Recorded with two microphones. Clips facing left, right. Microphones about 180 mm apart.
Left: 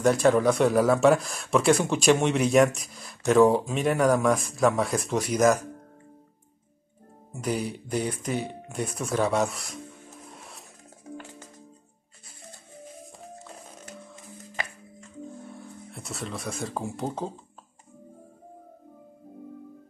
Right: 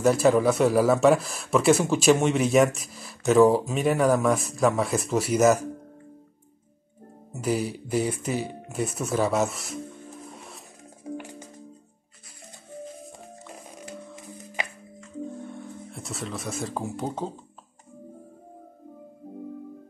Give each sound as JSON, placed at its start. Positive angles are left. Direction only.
{"t": 0.0, "sound": "speech", "side_deg": 0}
{"t": 7.3, "sound": "speech", "side_deg": -5}
{"t": 10.3, "sound": "a sound", "side_deg": 0}
{"t": 11.1, "sound": "music", "side_deg": -15}
{"t": 15.9, "sound": "speech", "side_deg": 0}